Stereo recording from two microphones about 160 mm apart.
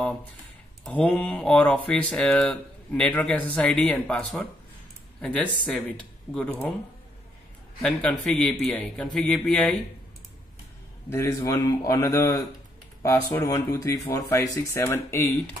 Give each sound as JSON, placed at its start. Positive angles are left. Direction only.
{"t": 0.8, "sound": "speech", "side_deg": 10}
{"t": 7.8, "sound": "a man's voice", "side_deg": 5}
{"t": 11.1, "sound": "a man's voice", "side_deg": 15}